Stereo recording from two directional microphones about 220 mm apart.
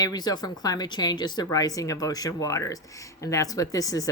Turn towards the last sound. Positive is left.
turn(degrees=15)  # may be behind; listen again after turning